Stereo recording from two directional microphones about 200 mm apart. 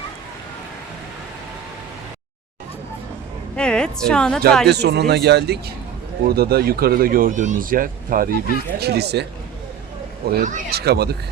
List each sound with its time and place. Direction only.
3.5 s a woman's voice: 5° left (ahead or behind)
4.7 s speech: 55° right (ahead or behind)
10.2 s speech: 45° right (ahead or behind)